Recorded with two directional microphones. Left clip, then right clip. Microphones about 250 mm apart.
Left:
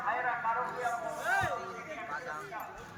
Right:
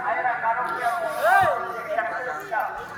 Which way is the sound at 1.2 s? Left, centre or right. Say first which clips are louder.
Right 14 dB; centre.